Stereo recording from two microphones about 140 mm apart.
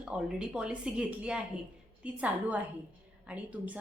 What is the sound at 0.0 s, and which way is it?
A woman's voice, 5° right (ahead or behind).